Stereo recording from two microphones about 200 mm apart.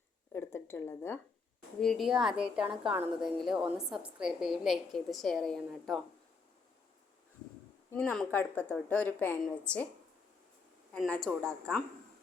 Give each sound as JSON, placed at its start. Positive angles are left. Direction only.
{"t": 0.3, "sound": "a woman's voice", "side_deg": 10}
{"t": 1.8, "sound": "a woman's voice", "side_deg": 0}
{"t": 7.9, "sound": "a woman's voice", "side_deg": 10}
{"t": 10.9, "sound": "a woman's voice", "side_deg": 5}